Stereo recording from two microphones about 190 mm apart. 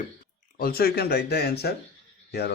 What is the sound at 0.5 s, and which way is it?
Speech, 50° left (ahead or behind).